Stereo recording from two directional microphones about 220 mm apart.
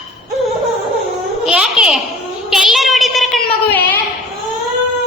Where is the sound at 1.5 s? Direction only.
5° right (ahead or behind).